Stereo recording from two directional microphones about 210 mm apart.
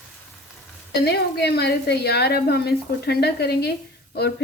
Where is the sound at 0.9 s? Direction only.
50° left (ahead or behind).